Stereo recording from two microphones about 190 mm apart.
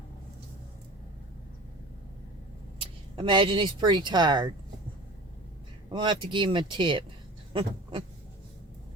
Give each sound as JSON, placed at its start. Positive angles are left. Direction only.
{"t": 3.2, "sound": "speech", "side_deg": -25}
{"t": 5.9, "sound": "speech", "side_deg": -25}
{"t": 7.5, "sound": "a sound", "side_deg": -25}